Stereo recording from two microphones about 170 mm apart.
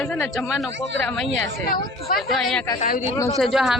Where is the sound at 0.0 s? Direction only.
5° left (ahead or behind).